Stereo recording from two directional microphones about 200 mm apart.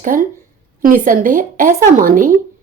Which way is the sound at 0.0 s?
40° right (ahead or behind).